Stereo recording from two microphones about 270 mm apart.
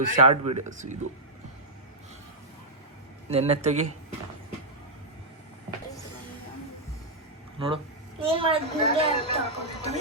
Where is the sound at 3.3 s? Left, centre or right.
Right.